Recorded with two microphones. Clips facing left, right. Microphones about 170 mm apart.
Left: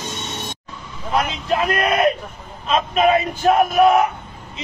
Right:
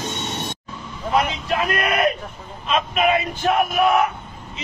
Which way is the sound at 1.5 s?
30° left (ahead or behind).